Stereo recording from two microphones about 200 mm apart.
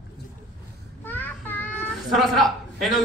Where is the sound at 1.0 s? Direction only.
10° left (ahead or behind).